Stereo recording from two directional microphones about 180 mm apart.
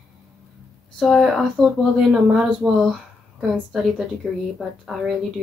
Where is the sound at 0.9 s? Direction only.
Centre (ahead or behind).